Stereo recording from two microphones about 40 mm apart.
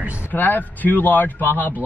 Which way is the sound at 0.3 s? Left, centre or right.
Left.